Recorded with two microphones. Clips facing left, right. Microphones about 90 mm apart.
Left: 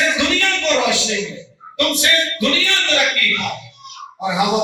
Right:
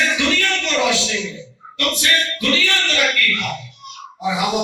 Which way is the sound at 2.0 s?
25° left (ahead or behind).